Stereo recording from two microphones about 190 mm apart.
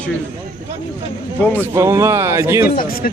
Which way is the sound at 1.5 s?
10° right (ahead or behind).